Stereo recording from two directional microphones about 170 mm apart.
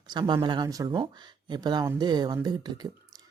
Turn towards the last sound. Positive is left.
turn(degrees=-25)  # may be behind; listen again after turning